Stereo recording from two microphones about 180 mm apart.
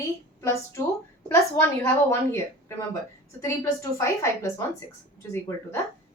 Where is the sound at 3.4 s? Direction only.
15° left (ahead or behind).